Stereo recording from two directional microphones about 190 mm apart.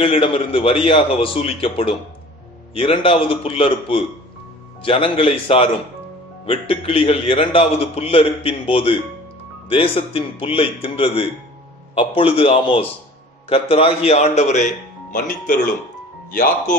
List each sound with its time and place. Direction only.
0.0 s a man's voice: 30° left (ahead or behind); by 16.7 s 45° left (ahead or behind)